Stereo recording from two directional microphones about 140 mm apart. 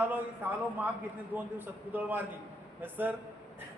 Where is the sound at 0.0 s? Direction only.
10° right (ahead or behind).